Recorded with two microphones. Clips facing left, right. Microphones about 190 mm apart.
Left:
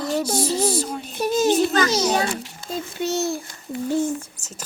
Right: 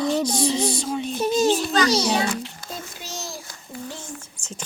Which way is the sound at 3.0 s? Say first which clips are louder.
Left 12 dB; 60° left (ahead or behind).